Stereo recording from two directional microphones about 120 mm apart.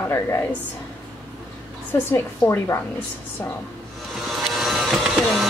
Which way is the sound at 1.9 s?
20° left (ahead or behind).